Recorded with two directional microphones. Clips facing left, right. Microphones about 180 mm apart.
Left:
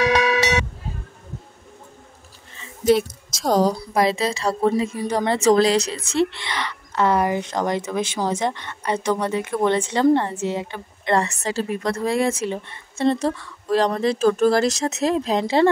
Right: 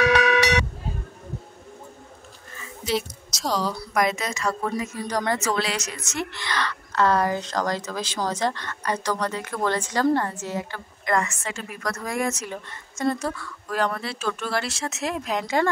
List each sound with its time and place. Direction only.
0.0 s a sound: 25° left (ahead or behind)
2.8 s a woman's voice: 50° left (ahead or behind)
3.7 s a woman's voice: 30° left (ahead or behind)
5.5 s a woman's voice: 35° left (ahead or behind)